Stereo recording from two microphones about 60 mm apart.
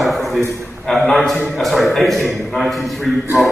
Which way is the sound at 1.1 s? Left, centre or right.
Centre.